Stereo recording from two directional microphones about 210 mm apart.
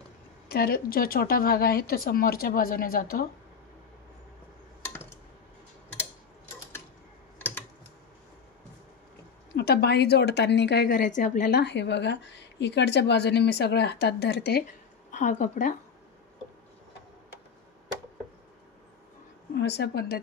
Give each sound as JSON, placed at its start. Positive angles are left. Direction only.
{"t": 0.5, "sound": "speech", "side_deg": 45}
{"t": 7.3, "sound": "typing", "side_deg": 10}
{"t": 9.6, "sound": "speech", "side_deg": 50}
{"t": 11.5, "sound": "speech", "side_deg": 55}
{"t": 15.0, "sound": "a woman's voice", "side_deg": 35}
{"t": 19.5, "sound": "speech", "side_deg": 50}